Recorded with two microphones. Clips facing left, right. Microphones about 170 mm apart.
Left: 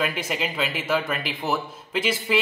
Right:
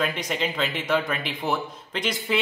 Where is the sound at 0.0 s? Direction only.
5° left (ahead or behind).